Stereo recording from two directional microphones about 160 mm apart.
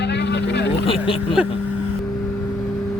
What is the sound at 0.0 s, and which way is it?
Vehicle, 90° left.